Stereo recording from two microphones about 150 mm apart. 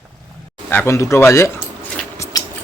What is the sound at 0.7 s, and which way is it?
Speech, 15° left (ahead or behind).